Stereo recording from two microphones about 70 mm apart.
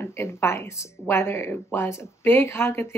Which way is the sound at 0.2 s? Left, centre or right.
Left.